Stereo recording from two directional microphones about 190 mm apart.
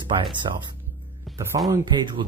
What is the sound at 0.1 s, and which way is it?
Speech, 25° right (ahead or behind).